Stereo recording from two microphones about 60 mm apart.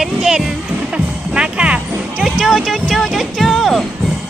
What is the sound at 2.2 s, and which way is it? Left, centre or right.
Speech, centre.